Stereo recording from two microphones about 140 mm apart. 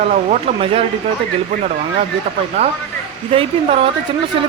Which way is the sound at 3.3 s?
40° right (ahead or behind).